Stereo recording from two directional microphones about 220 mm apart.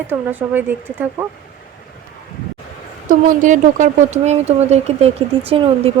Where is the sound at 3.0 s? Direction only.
35° right (ahead or behind).